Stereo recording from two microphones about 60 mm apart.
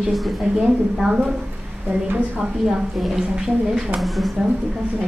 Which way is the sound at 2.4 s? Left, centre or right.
Centre.